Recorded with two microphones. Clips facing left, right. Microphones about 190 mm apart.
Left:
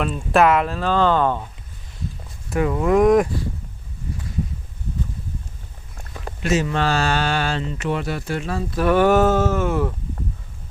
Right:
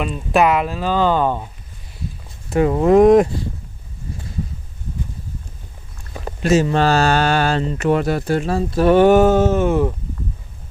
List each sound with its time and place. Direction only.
0.0 s speech: centre (ahead or behind)
2.5 s speech: 30° right (ahead or behind)
6.4 s speech: 35° right (ahead or behind)